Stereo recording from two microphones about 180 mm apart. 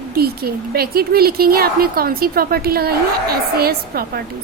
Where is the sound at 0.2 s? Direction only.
60° right (ahead or behind).